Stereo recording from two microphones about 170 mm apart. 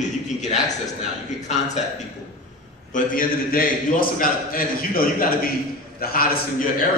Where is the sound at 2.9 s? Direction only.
55° left (ahead or behind).